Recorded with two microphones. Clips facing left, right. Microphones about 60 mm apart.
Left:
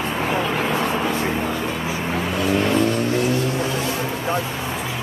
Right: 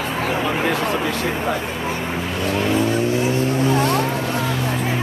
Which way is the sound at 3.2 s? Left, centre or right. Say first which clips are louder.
Right 2 dB; right.